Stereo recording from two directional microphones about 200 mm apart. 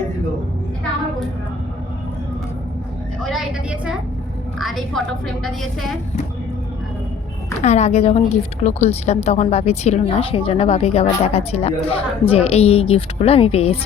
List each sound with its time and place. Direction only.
3.2 s a woman's voice: 5° right (ahead or behind)
7.6 s a woman's voice: 35° left (ahead or behind)